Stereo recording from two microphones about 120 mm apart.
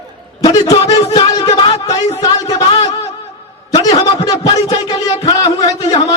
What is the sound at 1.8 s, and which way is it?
Speech, 30° left (ahead or behind).